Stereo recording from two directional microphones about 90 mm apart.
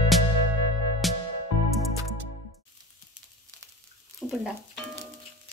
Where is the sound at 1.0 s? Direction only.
Centre (ahead or behind).